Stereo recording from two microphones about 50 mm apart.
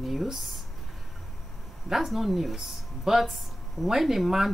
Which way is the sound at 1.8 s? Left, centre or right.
Centre.